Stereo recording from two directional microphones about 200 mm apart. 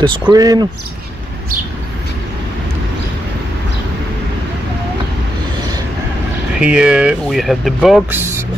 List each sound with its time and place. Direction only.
0.3 s speech: 20° right (ahead or behind)
6.6 s speech: 5° right (ahead or behind)